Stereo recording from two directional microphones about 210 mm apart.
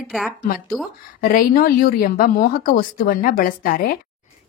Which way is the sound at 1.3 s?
45° left (ahead or behind).